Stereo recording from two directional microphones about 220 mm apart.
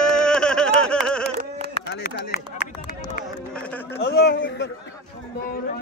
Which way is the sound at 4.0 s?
50° left (ahead or behind).